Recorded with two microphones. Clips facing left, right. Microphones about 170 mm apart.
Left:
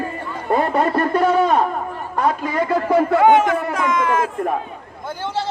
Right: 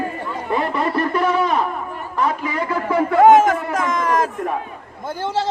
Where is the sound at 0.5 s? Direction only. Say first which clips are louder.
Left 3 dB; 45° left (ahead or behind).